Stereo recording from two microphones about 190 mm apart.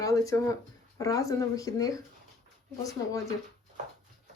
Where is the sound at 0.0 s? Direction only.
15° left (ahead or behind).